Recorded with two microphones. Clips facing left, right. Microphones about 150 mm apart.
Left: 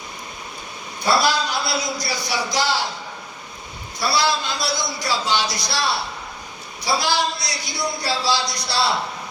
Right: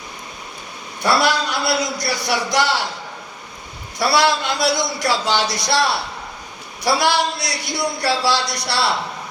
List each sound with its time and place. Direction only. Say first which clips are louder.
1.0 s a man's voice: right 2 dB; 70° right (ahead or behind)
4.0 s a man's voice: right 4 dB; 65° right (ahead or behind)
6.8 s a man's voice: right 4 dB; 70° right (ahead or behind)